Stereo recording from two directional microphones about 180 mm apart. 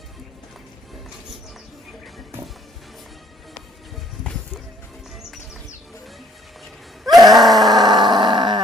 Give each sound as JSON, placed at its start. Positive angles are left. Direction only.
{"t": 4.2, "sound": "music", "side_deg": 5}
{"t": 7.0, "sound": "groan", "side_deg": 0}
{"t": 7.7, "sound": "grunt", "side_deg": -25}